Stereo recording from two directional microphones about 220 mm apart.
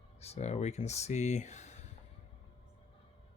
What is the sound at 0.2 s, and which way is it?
Speech, 30° left (ahead or behind).